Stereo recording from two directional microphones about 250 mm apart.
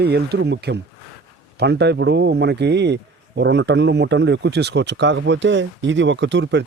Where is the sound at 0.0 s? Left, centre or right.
Right.